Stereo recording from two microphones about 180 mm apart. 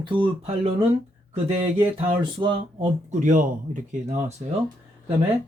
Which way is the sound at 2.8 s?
40° right (ahead or behind).